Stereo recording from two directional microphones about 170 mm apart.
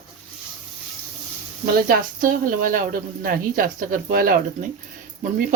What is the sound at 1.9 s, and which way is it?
Speech, 55° right (ahead or behind).